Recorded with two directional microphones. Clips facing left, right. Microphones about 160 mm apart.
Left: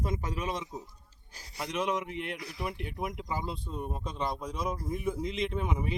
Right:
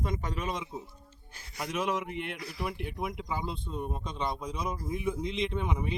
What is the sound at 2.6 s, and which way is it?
Speech, centre (ahead or behind).